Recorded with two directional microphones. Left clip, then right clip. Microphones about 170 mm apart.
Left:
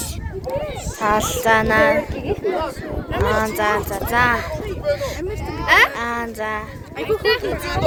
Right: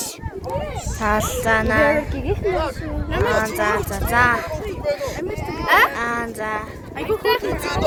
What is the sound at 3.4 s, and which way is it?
A woman's voice, 30° left (ahead or behind).